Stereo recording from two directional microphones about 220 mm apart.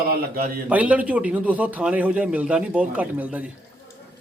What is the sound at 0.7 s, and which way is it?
Speech, 5° right (ahead or behind).